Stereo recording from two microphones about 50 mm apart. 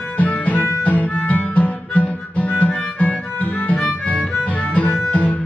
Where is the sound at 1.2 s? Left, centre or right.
Left.